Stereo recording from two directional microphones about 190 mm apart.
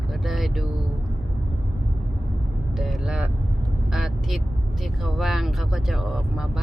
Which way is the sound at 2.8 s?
Centre (ahead or behind).